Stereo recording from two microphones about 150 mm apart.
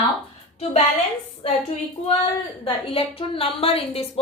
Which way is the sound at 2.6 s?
40° left (ahead or behind).